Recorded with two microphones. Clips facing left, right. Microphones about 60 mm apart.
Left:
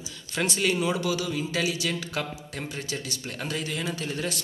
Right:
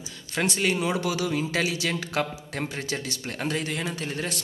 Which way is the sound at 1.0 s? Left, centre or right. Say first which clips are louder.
Right 1 dB; right.